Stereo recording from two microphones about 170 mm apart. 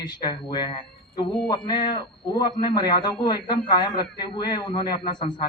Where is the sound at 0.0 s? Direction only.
25° left (ahead or behind).